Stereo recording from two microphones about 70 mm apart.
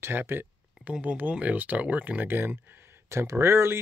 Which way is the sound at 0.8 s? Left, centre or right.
Centre.